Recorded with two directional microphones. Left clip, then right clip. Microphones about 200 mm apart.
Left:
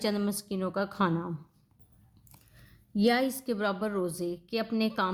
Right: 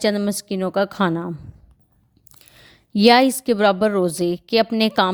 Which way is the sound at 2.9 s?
45° right (ahead or behind).